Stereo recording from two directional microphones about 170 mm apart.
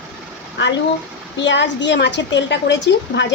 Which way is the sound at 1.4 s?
90° left.